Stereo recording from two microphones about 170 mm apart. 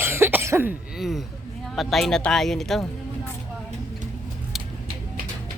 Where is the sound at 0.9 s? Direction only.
Centre (ahead or behind).